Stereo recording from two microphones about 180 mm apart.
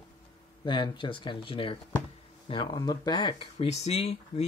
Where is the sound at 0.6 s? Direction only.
25° left (ahead or behind).